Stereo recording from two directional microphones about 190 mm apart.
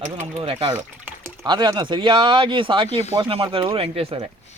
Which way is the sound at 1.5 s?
25° right (ahead or behind).